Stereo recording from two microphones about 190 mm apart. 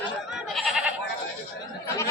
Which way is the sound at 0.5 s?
Centre (ahead or behind).